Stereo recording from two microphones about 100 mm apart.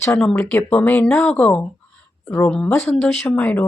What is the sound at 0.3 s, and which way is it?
Speech, 15° left (ahead or behind).